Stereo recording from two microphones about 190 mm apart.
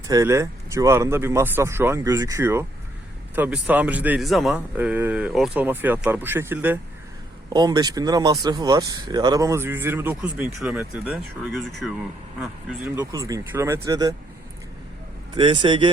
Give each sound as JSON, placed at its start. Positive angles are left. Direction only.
{"t": 0.1, "sound": "speech", "side_deg": -15}
{"t": 7.5, "sound": "speech", "side_deg": -20}
{"t": 13.0, "sound": "speech", "side_deg": -20}
{"t": 15.4, "sound": "speech", "side_deg": -25}